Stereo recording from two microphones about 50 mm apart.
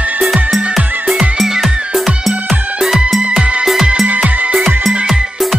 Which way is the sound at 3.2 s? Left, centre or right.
Centre.